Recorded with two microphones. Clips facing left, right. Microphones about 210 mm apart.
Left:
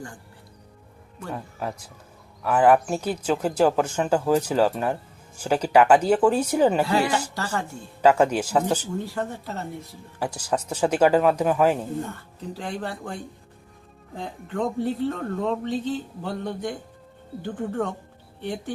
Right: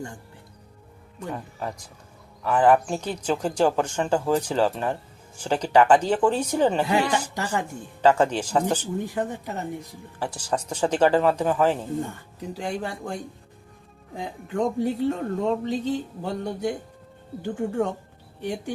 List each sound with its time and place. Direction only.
1.3 s speech: 5° left (ahead or behind)
7.3 s speech: 10° right (ahead or behind)
8.0 s speech: 10° left (ahead or behind)
9.0 s speech: 15° right (ahead or behind)
10.2 s speech: 10° left (ahead or behind)
12.0 s speech: 10° right (ahead or behind)